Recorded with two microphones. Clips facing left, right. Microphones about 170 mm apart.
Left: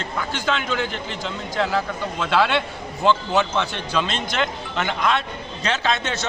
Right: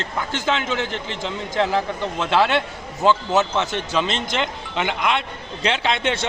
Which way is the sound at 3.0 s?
15° right (ahead or behind).